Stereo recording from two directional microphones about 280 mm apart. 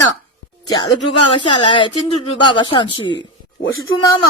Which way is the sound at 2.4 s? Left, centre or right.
Centre.